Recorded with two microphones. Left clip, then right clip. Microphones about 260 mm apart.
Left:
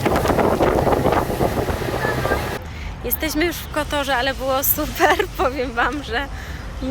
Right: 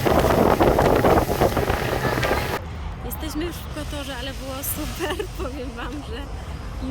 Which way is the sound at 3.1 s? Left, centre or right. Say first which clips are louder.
Left 9 dB; centre.